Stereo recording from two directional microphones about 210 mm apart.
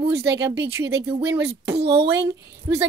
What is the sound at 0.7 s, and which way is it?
A woman's voice, 10° right (ahead or behind).